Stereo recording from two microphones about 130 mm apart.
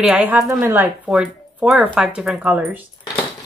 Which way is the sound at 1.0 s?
5° right (ahead or behind).